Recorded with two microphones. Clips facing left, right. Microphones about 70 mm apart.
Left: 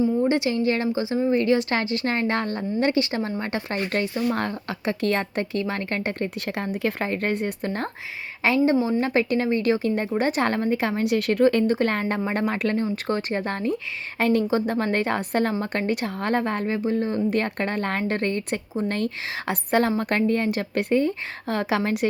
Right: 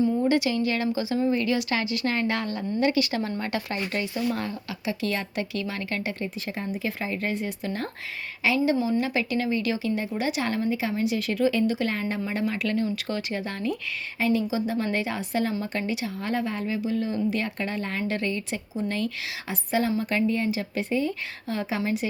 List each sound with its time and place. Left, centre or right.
0.0 s a woman's voice: left
14.2 s a woman's voice: left